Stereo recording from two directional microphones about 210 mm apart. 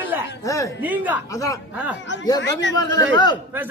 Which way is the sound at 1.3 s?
15° left (ahead or behind).